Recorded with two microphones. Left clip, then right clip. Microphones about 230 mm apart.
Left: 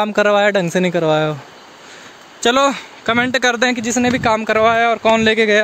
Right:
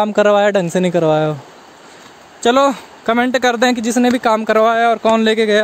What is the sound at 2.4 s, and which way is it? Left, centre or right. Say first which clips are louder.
Speech: right 2 dB; centre.